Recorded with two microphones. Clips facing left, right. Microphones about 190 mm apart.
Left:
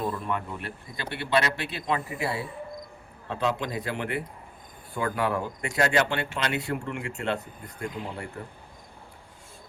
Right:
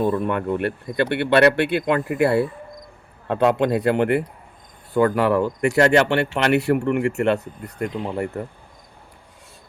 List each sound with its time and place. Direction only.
0.0 s speech: 65° right (ahead or behind)